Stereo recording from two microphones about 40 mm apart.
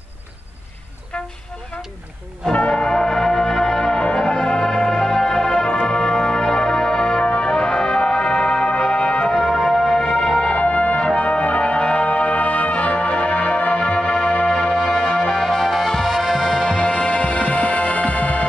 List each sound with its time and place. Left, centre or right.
2.7 s music: centre
7.3 s brass instrument: centre
9.4 s music: centre
9.9 s music: centre
10.5 s music: left
14.8 s music: centre
15.4 s music: centre; by 18.4 s left